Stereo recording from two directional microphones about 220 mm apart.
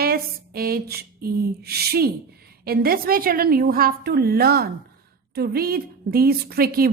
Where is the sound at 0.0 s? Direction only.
45° right (ahead or behind).